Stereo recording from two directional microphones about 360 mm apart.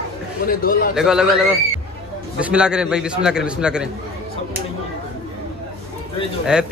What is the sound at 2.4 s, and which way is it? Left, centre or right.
Mantra, centre.